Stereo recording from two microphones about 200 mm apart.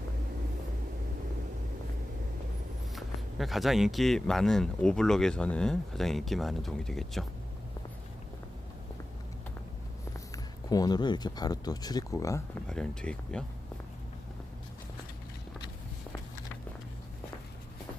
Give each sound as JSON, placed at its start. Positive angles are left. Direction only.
{"t": 2.9, "sound": "speech", "side_deg": 0}
{"t": 10.3, "sound": "speech", "side_deg": 20}
{"t": 12.6, "sound": "speech", "side_deg": 5}